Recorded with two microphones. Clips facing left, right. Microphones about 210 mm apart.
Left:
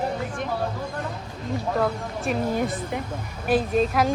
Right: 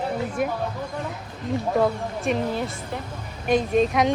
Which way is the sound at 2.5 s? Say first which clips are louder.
Left 3 dB; 15° left (ahead or behind).